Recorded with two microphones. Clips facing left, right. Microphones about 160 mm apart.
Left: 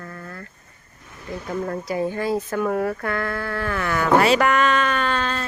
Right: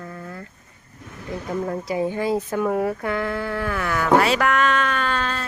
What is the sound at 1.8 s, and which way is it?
Speech, 15° right (ahead or behind).